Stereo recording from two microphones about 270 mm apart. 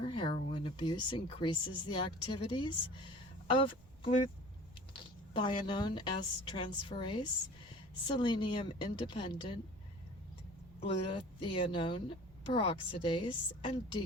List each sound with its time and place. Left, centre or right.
0.0 s a woman's voice: centre
10.8 s a woman's voice: centre